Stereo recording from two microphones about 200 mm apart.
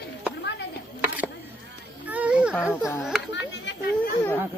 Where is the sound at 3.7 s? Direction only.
60° left (ahead or behind).